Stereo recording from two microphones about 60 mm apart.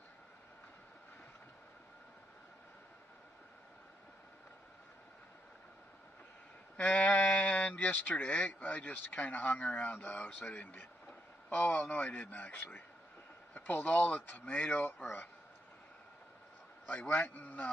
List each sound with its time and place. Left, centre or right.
6.8 s speech: left
13.6 s a sound: left
13.8 s speech: left
16.8 s a man's voice: centre
17.1 s speech: left